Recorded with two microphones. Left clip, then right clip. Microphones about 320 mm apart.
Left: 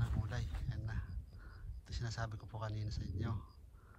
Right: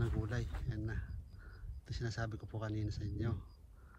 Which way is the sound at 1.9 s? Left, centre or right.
Centre.